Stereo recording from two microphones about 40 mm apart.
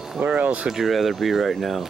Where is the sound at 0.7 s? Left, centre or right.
Centre.